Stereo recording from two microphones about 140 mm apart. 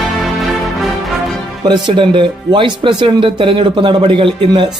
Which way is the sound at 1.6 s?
35° right (ahead or behind).